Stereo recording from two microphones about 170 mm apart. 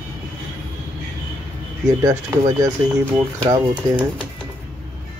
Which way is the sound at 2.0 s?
20° right (ahead or behind).